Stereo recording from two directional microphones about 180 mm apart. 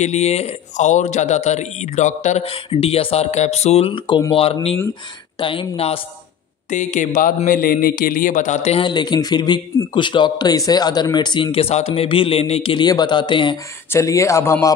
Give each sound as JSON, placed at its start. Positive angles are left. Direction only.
{"t": 0.0, "sound": "a man's voice", "side_deg": 40}
{"t": 6.7, "sound": "a man's voice", "side_deg": 45}